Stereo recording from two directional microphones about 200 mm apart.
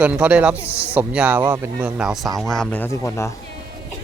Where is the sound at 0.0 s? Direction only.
5° right (ahead or behind).